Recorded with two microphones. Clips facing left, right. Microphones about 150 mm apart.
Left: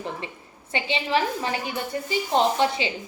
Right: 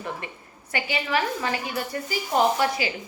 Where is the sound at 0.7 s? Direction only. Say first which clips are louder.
Left 2 dB; 25° left (ahead or behind).